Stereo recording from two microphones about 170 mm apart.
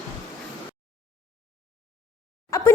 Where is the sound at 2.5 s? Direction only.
15° left (ahead or behind).